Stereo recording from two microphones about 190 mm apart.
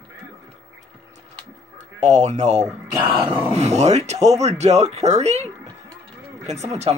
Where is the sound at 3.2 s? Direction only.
10° right (ahead or behind).